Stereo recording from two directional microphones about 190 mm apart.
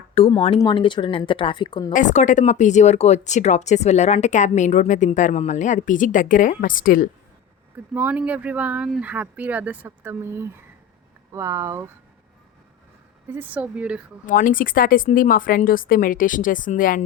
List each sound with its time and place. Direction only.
0.1 s speech: 30° left (ahead or behind)
1.9 s speech: 40° left (ahead or behind)
7.9 s speech: 10° right (ahead or behind)
13.3 s speech: 10° right (ahead or behind)
14.3 s speech: 45° left (ahead or behind)